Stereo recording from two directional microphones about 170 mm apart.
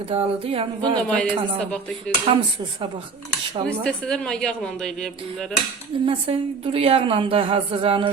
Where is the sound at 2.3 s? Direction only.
30° right (ahead or behind).